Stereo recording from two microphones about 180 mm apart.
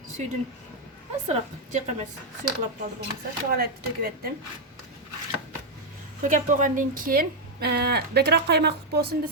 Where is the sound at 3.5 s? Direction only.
55° right (ahead or behind).